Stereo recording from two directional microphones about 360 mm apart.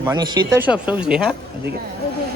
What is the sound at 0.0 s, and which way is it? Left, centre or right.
Speech, centre.